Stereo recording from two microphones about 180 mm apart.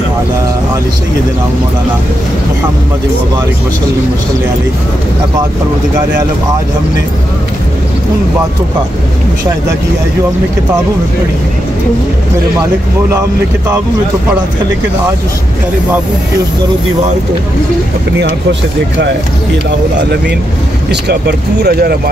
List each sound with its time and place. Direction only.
20.9 s speech: 65° right (ahead or behind)